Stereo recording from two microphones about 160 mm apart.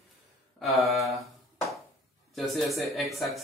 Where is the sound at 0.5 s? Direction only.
Centre (ahead or behind).